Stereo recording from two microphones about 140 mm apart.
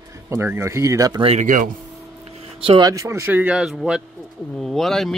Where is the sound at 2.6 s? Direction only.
35° right (ahead or behind).